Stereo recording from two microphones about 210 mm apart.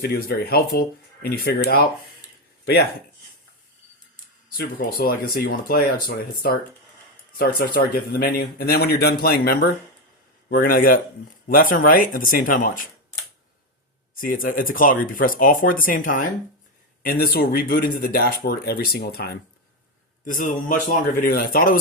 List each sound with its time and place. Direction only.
0.0 s speech: 45° left (ahead or behind)
4.5 s speech: 45° left (ahead or behind)
14.2 s speech: 40° left (ahead or behind)
20.2 s speech: 40° left (ahead or behind)